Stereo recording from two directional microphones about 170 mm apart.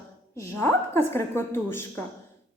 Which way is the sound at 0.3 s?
15° left (ahead or behind).